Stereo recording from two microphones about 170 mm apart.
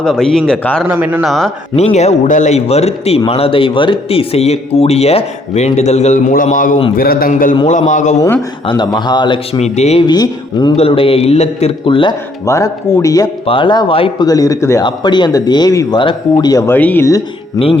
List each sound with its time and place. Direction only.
0.0 s a man's voice: 5° left (ahead or behind)
0.9 s speech: 10° right (ahead or behind)
1.2 s a man's voice: centre (ahead or behind)
1.7 s a man's voice: 40° left (ahead or behind)
8.6 s speech: 25° left (ahead or behind)
9.6 s speech: 40° left (ahead or behind)
10.1 s speech: 25° left (ahead or behind)
12.5 s speech: 20° left (ahead or behind)
13.4 s speech: 30° left (ahead or behind)